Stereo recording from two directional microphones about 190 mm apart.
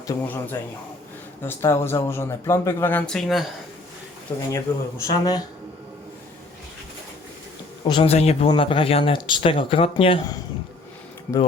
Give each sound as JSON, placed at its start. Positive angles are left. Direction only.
{"t": 0.1, "sound": "a man's voice", "side_deg": 10}
{"t": 4.5, "sound": "a man's voice", "side_deg": 15}
{"t": 7.9, "sound": "speech", "side_deg": 30}
{"t": 11.3, "sound": "a man's voice", "side_deg": 5}